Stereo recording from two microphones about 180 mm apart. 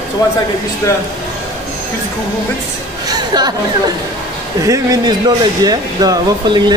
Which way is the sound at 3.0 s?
20° right (ahead or behind).